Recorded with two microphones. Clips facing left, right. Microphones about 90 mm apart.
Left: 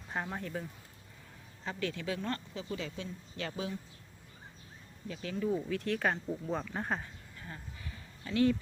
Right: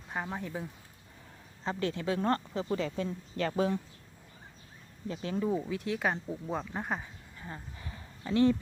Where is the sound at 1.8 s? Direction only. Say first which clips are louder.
Right 5 dB; 30° right (ahead or behind); by 3.8 s 50° right (ahead or behind).